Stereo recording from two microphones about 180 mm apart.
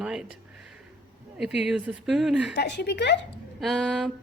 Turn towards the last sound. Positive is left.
turn(degrees=0)  # may be behind; listen again after turning